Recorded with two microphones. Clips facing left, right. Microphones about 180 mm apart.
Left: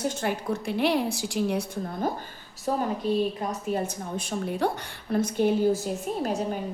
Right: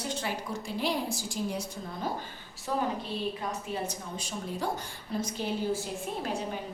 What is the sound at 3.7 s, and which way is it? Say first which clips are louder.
A woman's voice: left 6 dB; 55° left (ahead or behind).